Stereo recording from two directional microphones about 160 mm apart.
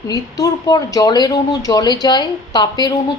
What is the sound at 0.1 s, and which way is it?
Speech, 20° left (ahead or behind).